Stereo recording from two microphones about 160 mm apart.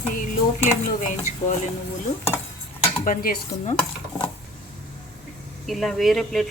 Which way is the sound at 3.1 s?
65° left (ahead or behind).